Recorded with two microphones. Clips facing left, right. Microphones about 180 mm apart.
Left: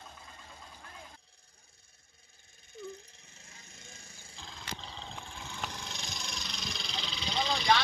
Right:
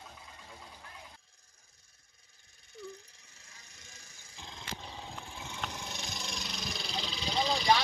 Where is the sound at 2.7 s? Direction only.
25° left (ahead or behind).